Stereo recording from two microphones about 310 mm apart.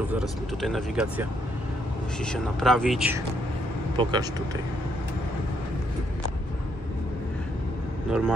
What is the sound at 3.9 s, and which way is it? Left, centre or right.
Speech, centre.